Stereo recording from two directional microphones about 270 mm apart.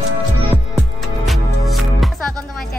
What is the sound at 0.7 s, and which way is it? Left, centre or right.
Music, centre.